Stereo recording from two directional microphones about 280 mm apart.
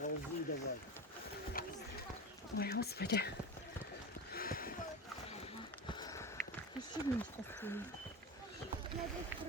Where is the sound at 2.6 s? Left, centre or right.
Left.